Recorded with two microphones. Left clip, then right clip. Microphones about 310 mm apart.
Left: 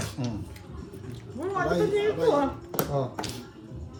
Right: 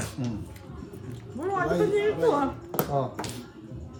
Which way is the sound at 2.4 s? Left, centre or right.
Centre.